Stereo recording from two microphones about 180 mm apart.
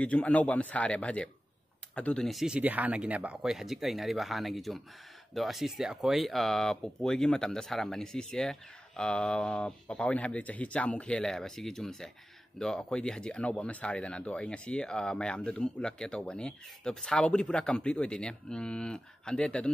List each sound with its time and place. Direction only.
0.0 s speech: 5° left (ahead or behind)